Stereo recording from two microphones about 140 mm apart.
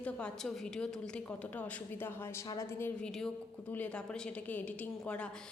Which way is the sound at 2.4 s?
30° left (ahead or behind).